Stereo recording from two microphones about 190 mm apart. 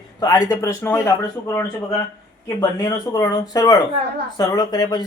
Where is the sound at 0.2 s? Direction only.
20° left (ahead or behind).